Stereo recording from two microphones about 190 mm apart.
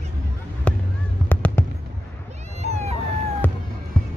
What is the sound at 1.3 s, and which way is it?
Fireworks, 10° left (ahead or behind).